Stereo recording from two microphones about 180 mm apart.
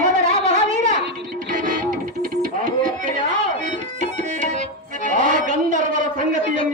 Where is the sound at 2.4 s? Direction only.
45° right (ahead or behind).